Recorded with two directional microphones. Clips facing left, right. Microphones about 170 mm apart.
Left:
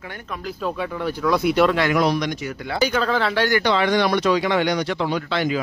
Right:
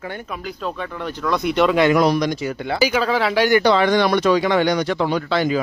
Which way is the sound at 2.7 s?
10° right (ahead or behind).